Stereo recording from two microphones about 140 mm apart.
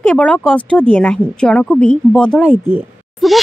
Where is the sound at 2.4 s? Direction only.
15° right (ahead or behind).